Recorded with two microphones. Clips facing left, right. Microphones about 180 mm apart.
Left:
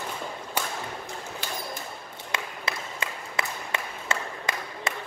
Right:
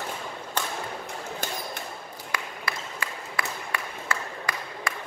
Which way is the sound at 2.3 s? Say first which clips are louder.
Left 1 dB; 20° left (ahead or behind).